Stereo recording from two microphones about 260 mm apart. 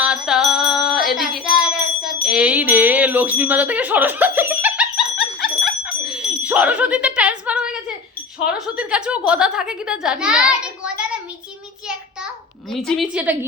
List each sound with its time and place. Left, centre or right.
0.0 s music: centre
2.0 s bell: centre
8.5 s a child's voice: centre
12.7 s a child's voice: centre